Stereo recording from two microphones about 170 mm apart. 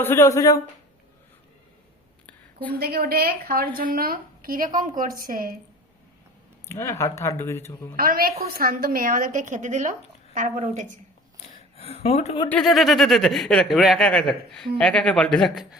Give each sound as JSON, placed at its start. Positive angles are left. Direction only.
{"t": 0.0, "sound": "speech", "side_deg": 15}
{"t": 2.2, "sound": "a sound", "side_deg": 10}
{"t": 2.7, "sound": "a woman's voice", "side_deg": -65}
{"t": 6.7, "sound": "speech", "side_deg": 15}
{"t": 7.9, "sound": "a woman's voice", "side_deg": -60}
{"t": 11.8, "sound": "speech", "side_deg": 35}
{"t": 12.5, "sound": "speech", "side_deg": 5}